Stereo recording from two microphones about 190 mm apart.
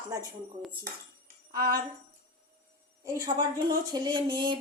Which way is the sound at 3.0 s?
15° right (ahead or behind).